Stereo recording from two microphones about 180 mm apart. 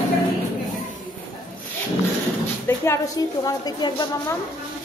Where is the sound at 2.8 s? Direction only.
15° left (ahead or behind).